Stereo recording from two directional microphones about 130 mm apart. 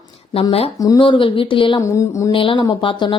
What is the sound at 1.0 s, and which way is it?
Speech, 40° left (ahead or behind).